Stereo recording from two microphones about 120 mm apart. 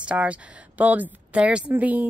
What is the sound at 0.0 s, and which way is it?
A woman's voice, 10° right (ahead or behind).